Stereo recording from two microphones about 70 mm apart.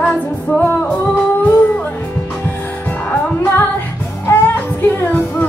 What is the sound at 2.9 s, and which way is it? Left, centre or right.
Music, left.